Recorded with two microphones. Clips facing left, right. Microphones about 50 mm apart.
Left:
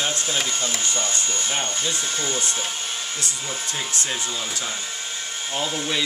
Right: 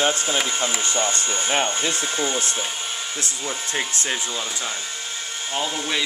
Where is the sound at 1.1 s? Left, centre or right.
Right.